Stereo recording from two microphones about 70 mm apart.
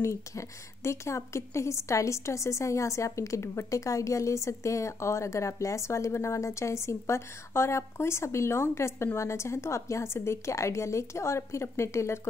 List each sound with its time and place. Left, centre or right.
0.0 s a woman's voice: left